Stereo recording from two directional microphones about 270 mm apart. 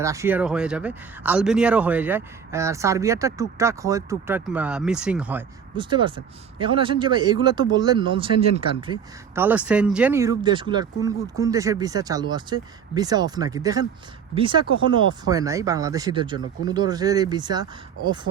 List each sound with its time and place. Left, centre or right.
0.0 s speech: centre
5.7 s speech: centre
8.9 s speech: centre